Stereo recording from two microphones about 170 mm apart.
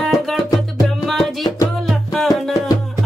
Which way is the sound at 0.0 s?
Centre (ahead or behind).